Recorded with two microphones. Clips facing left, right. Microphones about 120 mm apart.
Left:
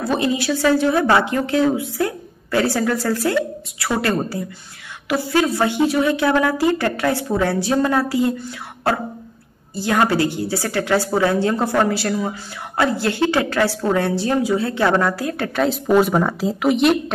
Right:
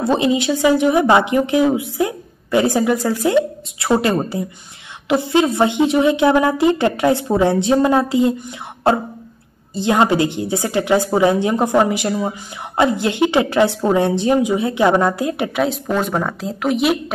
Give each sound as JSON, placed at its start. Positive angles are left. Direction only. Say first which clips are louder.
{"t": 0.0, "sound": "a woman's voice", "louder": "right 4 dB", "side_deg": -20}
{"t": 15.9, "sound": "speech", "louder": "left 4 dB", "side_deg": 5}